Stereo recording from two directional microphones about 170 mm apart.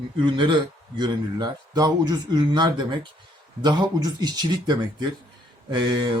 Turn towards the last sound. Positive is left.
turn(degrees=-25)  # may be behind; listen again after turning